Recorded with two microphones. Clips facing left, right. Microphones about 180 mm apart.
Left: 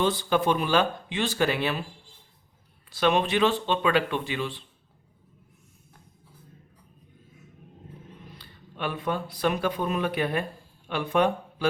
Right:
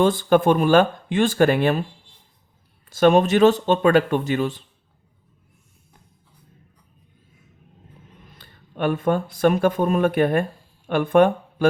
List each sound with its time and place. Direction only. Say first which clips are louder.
0.0 s speech: right 7 dB; 50° right (ahead or behind)
2.9 s speech: right 8 dB; 45° right (ahead or behind)
8.4 s speech: right 9 dB; 50° right (ahead or behind)